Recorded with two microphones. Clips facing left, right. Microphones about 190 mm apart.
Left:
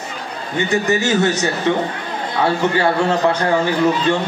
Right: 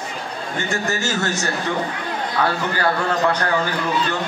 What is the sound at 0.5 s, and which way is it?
A man's voice, 20° left (ahead or behind).